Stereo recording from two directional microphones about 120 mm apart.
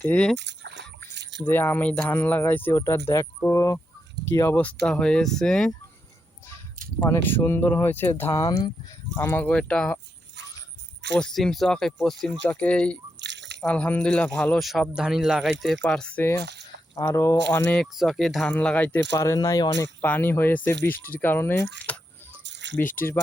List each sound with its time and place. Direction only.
0.0 s speech: 10° left (ahead or behind)
1.5 s speech: 15° left (ahead or behind)
7.1 s speech: 20° left (ahead or behind)
8.3 s speech: 35° left (ahead or behind)
9.1 s speech: 15° left (ahead or behind)
11.1 s speech: 5° left (ahead or behind)
14.6 s speech: centre (ahead or behind)
17.0 s speech: 25° left (ahead or behind)
17.9 s speech: centre (ahead or behind)
18.5 s speech: 10° left (ahead or behind)
19.1 s speech: 30° left (ahead or behind)
20.0 s speech: 15° left (ahead or behind)